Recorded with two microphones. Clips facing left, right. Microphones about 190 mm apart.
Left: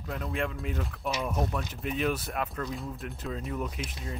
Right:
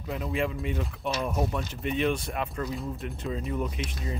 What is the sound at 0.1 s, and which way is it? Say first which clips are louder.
Speech: right 3 dB; centre (ahead or behind).